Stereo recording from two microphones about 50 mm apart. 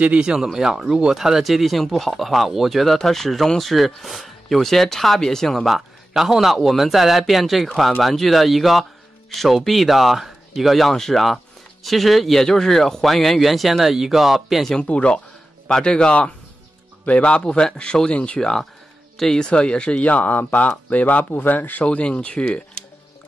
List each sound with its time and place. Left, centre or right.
0.0 s speech: right
0.4 s speech: centre
5.7 s speech: centre
14.8 s a man's voice: left
21.8 s speech: left